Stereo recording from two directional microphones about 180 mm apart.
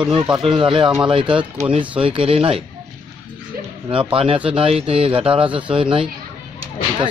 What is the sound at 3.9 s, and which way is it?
Speech, 30° right (ahead or behind).